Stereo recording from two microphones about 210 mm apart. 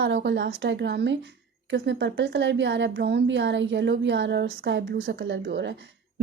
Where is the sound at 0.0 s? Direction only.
55° right (ahead or behind).